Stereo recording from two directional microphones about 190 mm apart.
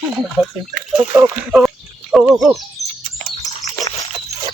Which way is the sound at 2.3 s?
Centre (ahead or behind).